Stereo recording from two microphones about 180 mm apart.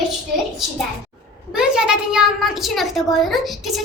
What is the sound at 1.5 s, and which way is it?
A child's voice, 5° right (ahead or behind).